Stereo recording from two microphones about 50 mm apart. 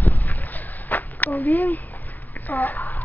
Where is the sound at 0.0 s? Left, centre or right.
Left.